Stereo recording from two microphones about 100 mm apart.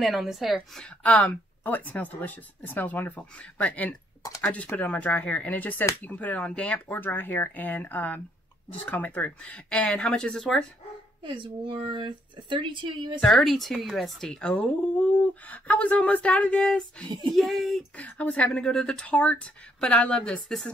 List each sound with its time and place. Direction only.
0.0 s a woman's voice: centre (ahead or behind)
0.8 s speech: 15° left (ahead or behind)
4.2 s speech: 35° left (ahead or behind)
4.7 s speech: 15° left (ahead or behind)
11.2 s speech: 55° right (ahead or behind)
13.2 s a woman's voice: centre (ahead or behind)
17.9 s speech: 15° left (ahead or behind)